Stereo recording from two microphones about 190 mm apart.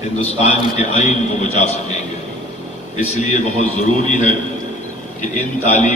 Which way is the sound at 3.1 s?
35° left (ahead or behind).